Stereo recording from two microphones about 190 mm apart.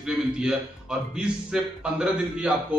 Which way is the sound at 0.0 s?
5° right (ahead or behind).